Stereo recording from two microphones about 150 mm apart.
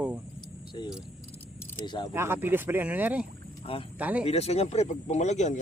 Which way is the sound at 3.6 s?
35° left (ahead or behind).